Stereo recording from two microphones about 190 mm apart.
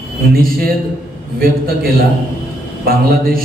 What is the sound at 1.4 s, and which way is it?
A man's voice, 50° right (ahead or behind).